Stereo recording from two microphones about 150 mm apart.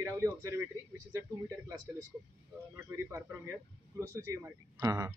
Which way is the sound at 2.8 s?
15° right (ahead or behind).